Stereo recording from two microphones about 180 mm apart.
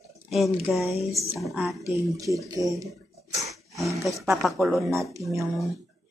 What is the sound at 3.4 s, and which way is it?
Roaring cats, 15° right (ahead or behind).